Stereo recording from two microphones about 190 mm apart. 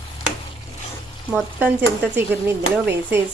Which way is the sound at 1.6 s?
10° right (ahead or behind).